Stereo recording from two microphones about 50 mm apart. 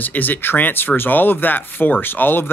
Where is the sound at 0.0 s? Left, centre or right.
Left.